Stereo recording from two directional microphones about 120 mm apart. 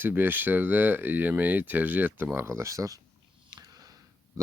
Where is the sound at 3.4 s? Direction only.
35° right (ahead or behind).